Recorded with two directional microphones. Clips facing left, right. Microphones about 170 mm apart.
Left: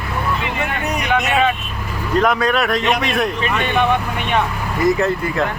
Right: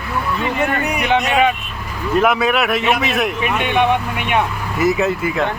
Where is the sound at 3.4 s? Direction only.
15° right (ahead or behind).